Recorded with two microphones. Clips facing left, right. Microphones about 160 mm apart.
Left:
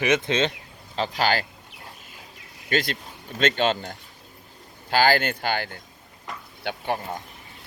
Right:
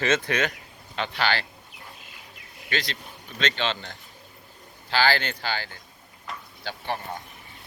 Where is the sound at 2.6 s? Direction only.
50° left (ahead or behind).